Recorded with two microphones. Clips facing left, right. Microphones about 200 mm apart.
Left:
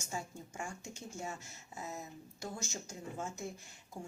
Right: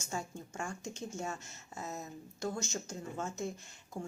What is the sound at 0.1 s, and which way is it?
A woman's voice, 15° left (ahead or behind).